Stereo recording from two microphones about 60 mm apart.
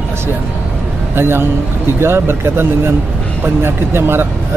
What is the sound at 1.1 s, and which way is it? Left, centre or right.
A man's voice, right.